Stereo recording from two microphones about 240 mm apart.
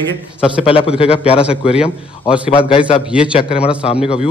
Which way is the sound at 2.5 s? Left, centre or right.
Left.